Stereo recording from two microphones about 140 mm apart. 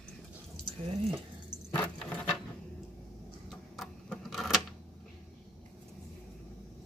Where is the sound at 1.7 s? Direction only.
10° left (ahead or behind).